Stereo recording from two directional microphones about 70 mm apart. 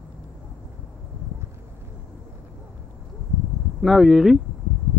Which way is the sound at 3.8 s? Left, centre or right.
Centre.